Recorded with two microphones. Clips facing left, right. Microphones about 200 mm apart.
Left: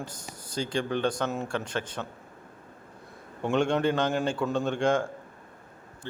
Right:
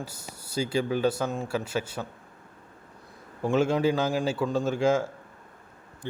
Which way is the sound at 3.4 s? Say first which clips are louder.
Right 1 dB; 5° right (ahead or behind).